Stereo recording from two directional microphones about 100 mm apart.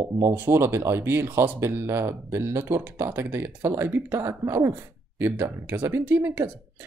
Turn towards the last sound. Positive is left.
turn(degrees=-20)  # may be behind; listen again after turning